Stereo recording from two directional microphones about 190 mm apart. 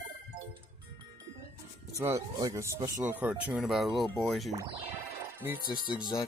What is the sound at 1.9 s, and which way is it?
Speech, 15° right (ahead or behind).